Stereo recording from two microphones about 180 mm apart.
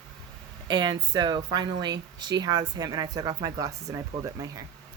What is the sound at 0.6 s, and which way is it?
Speech, 25° right (ahead or behind).